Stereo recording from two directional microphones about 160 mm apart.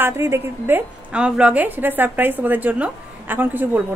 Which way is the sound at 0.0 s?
15° right (ahead or behind).